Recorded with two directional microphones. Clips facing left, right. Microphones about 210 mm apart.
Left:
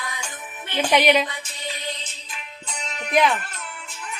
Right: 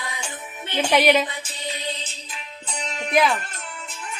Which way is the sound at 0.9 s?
Centre (ahead or behind).